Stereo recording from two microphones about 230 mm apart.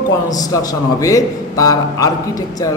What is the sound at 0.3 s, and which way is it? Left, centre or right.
A man's voice, centre.